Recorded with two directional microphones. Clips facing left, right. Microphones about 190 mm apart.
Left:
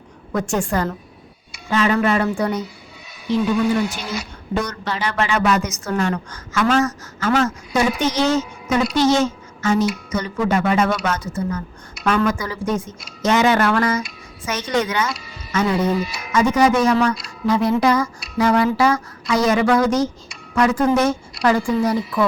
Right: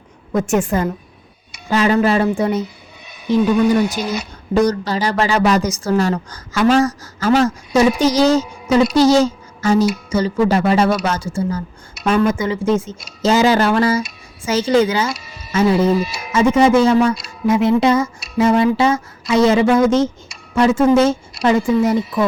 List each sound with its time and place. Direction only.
0.3 s speech: 20° right (ahead or behind)
1.7 s speech: 35° right (ahead or behind)
4.5 s a woman's voice: 35° right (ahead or behind)
9.0 s a woman's voice: 35° right (ahead or behind)